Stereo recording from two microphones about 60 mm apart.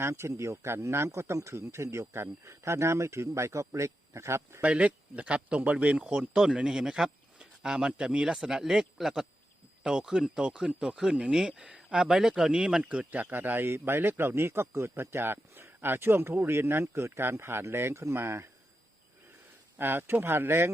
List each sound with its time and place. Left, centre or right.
0.0 s speech: right
4.7 s a man's voice: centre; by 18.4 s right
19.8 s a man's voice: right